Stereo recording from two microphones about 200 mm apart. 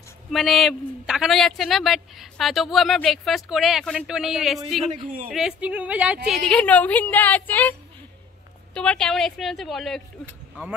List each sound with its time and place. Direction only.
0.3 s a man's voice: centre (ahead or behind)
4.8 s a man's voice: 35° right (ahead or behind)
5.3 s speech: 5° right (ahead or behind)
8.7 s a man's voice: 5° left (ahead or behind)